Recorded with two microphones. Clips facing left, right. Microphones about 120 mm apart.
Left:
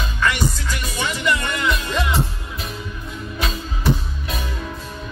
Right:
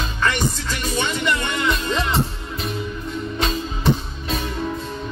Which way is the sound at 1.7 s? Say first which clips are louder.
Even; 5° left (ahead or behind).